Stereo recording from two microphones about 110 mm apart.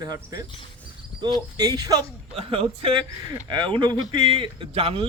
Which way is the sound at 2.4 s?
60° right (ahead or behind).